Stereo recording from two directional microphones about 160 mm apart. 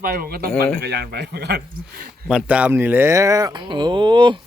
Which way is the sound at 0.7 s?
85° right.